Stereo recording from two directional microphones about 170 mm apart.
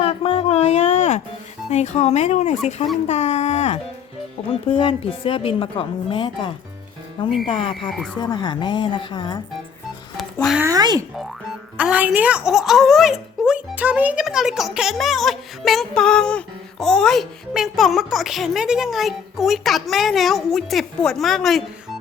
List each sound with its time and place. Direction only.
0.0 s a sound: 35° left (ahead or behind)
1.7 s a woman's voice: 40° left (ahead or behind)
10.3 s speech: centre (ahead or behind)
10.6 s speech: 20° right (ahead or behind)
11.8 s a child's voice: 10° right (ahead or behind)